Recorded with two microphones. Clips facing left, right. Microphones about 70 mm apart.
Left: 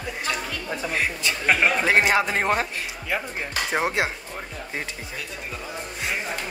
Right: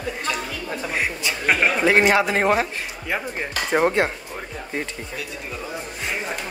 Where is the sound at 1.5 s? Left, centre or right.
Centre.